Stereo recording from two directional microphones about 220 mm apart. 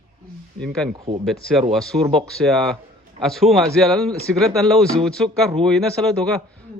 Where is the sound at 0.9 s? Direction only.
20° right (ahead or behind).